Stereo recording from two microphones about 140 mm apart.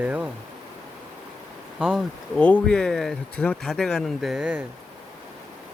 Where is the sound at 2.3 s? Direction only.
10° left (ahead or behind); by 4.6 s 10° right (ahead or behind).